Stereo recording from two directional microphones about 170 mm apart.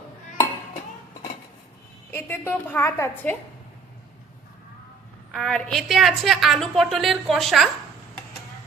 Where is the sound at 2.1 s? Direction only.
15° left (ahead or behind).